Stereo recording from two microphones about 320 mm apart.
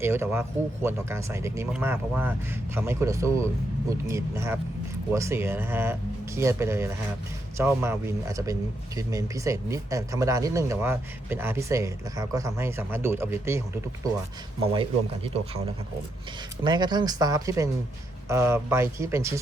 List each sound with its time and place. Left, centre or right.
0.0 s speech: centre
14.6 s speech: centre